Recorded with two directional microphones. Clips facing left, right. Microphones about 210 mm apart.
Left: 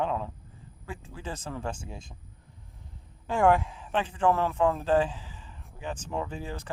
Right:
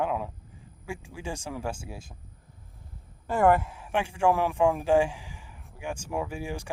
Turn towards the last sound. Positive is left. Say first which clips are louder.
# right 2 dB
turn(degrees=-10)  # may be behind; listen again after turning